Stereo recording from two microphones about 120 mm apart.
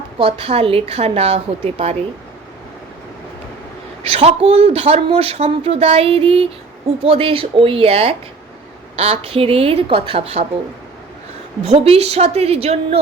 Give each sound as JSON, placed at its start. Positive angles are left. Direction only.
{"t": 0.2, "sound": "speech", "side_deg": -50}
{"t": 4.1, "sound": "speech", "side_deg": -60}
{"t": 11.6, "sound": "speech", "side_deg": -60}